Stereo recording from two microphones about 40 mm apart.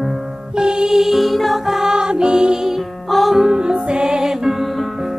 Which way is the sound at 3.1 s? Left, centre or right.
Centre.